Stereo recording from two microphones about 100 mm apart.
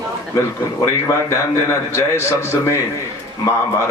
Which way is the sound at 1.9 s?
30° left (ahead or behind).